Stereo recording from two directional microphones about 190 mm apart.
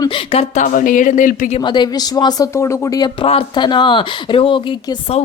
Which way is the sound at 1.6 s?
25° left (ahead or behind).